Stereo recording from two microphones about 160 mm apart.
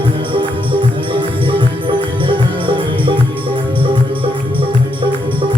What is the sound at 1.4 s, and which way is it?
Music, 30° right (ahead or behind).